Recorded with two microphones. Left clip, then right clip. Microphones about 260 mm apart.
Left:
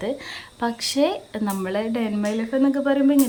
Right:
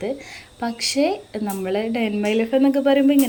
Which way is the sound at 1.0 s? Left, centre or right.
Left.